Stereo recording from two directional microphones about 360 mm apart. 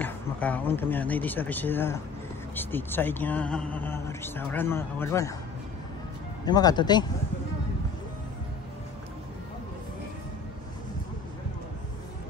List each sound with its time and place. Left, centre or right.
0.0 s speech: centre
6.4 s speech: centre